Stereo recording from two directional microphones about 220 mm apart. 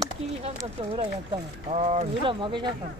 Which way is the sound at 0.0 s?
20° right (ahead or behind).